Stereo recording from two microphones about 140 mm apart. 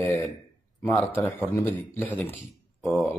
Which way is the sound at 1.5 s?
15° left (ahead or behind).